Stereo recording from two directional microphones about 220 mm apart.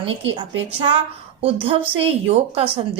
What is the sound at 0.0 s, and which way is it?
Speech, 25° right (ahead or behind).